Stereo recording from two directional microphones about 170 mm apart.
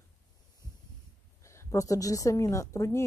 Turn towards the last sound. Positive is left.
turn(degrees=15)  # may be behind; listen again after turning